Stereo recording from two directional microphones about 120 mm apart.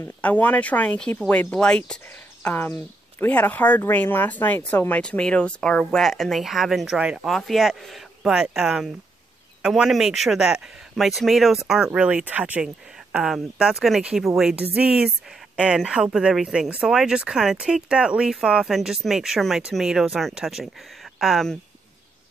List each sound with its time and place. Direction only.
0.0 s speech: 15° left (ahead or behind)